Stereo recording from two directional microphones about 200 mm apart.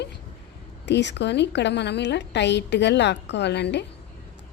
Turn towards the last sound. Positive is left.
turn(degrees=60)  # may be behind; listen again after turning